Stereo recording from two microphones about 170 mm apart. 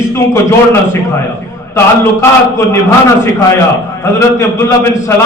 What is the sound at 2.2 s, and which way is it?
A man's voice, 15° left (ahead or behind).